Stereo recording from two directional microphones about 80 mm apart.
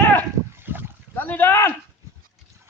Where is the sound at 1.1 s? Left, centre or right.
Left.